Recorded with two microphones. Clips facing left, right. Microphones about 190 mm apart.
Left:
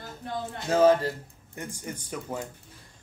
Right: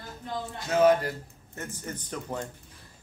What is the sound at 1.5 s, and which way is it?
Speech, 15° left (ahead or behind).